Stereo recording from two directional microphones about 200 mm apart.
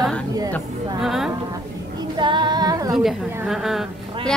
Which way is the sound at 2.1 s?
25° right (ahead or behind).